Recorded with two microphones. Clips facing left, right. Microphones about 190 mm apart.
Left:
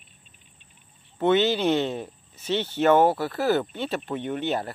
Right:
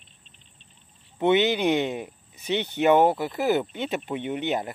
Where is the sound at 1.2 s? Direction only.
15° right (ahead or behind).